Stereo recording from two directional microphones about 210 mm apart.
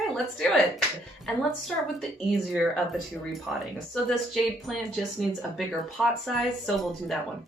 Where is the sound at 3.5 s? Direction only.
Centre (ahead or behind).